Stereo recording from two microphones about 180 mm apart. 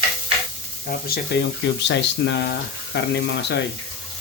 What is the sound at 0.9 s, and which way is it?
Speech, 60° left (ahead or behind).